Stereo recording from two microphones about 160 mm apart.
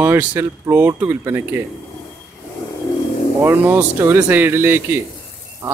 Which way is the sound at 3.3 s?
15° right (ahead or behind).